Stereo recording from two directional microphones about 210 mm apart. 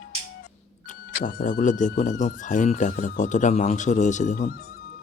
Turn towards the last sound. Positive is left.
turn(degrees=35)  # may be behind; listen again after turning